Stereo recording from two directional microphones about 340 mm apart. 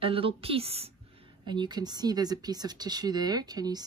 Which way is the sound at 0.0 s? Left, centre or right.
Centre.